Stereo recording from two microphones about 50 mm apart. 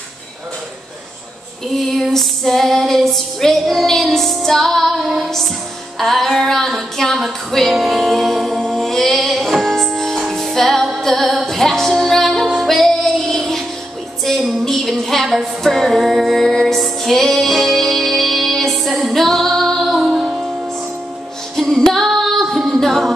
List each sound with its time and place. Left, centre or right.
1.7 s female singing: centre
7.2 s music: centre
21.5 s female singing: centre